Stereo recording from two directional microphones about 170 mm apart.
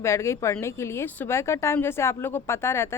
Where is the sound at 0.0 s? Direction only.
15° left (ahead or behind).